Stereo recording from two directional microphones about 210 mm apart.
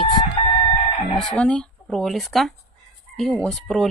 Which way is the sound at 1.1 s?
5° left (ahead or behind).